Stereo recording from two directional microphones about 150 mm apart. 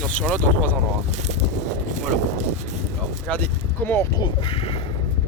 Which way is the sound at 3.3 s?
5° left (ahead or behind).